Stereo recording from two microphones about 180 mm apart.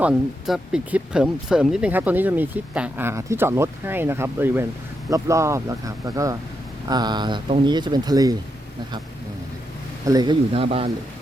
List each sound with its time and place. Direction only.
0.0 s speech: 5° right (ahead or behind); by 8.4 s 20° right (ahead or behind)
10.1 s speech: 25° right (ahead or behind)